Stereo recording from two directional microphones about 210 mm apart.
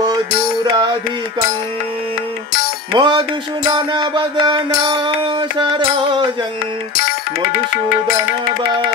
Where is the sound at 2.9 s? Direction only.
20° right (ahead or behind).